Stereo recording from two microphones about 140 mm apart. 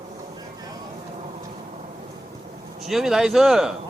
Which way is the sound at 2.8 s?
Centre (ahead or behind).